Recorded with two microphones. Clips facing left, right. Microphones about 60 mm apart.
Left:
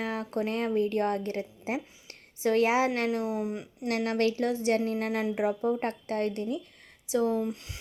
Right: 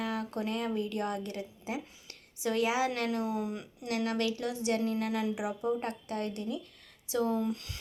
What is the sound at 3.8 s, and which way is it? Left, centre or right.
A woman's voice, left.